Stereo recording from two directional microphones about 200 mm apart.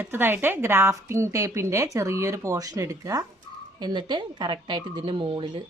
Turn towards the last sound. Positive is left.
turn(degrees=-25)  # may be behind; listen again after turning